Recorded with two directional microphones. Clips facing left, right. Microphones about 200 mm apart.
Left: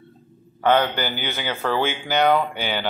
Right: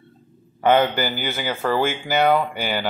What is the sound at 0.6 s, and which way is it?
Speech, 10° right (ahead or behind).